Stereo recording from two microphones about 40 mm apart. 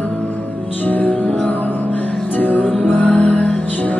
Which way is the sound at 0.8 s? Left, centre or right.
Left.